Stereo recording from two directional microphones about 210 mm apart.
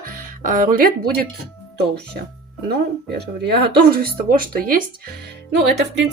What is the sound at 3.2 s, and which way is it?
Speech, 50° right (ahead or behind).